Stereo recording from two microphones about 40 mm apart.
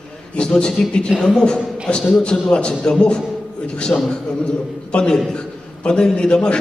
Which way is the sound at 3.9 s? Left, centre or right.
Left.